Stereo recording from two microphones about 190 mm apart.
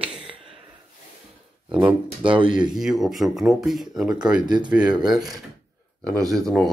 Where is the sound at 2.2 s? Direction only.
25° right (ahead or behind).